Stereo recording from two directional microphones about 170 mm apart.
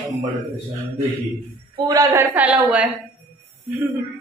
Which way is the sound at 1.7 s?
20° right (ahead or behind).